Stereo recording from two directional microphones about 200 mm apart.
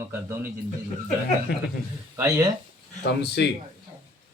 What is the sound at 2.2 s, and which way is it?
Speech, 15° right (ahead or behind).